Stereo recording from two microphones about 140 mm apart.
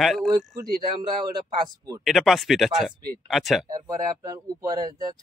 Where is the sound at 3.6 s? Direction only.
25° right (ahead or behind).